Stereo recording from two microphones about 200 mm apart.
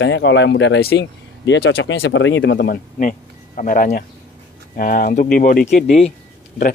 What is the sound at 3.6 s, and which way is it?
Speech, 45° left (ahead or behind).